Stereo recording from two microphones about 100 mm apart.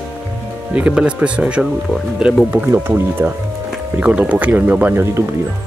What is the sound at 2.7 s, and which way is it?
Speech, 25° right (ahead or behind).